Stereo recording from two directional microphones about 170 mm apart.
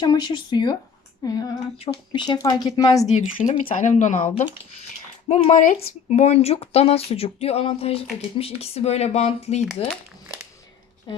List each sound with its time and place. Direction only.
0.0 s speech: 25° left (ahead or behind)
3.1 s speech: 45° left (ahead or behind)